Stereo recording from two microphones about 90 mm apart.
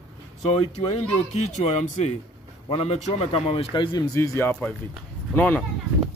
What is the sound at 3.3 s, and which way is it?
Speech, 80° left.